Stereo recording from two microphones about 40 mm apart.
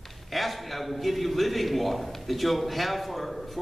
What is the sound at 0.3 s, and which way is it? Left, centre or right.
A man's voice, centre.